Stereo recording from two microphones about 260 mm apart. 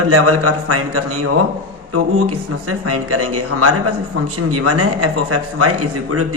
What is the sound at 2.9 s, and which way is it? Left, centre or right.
A man's voice, right.